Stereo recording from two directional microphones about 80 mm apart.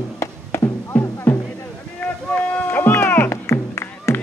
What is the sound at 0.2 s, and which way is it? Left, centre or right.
Music, left.